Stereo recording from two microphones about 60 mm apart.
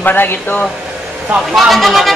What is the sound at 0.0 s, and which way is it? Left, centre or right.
Speech, left.